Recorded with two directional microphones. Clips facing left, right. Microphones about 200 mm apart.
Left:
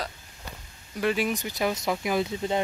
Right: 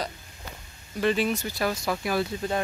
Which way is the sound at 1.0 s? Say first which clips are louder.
Right 1 dB; 10° left (ahead or behind).